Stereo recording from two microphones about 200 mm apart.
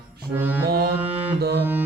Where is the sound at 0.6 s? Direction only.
50° right (ahead or behind).